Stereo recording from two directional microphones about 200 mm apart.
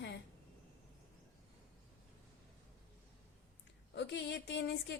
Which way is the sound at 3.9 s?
60° left (ahead or behind).